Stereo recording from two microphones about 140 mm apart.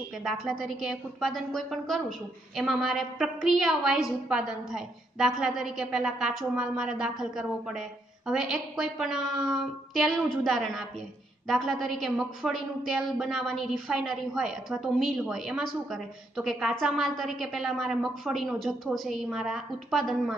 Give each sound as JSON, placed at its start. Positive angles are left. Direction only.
{"t": 0.2, "sound": "a woman's voice", "side_deg": 0}